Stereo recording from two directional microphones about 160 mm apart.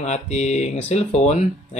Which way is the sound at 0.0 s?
45° left (ahead or behind).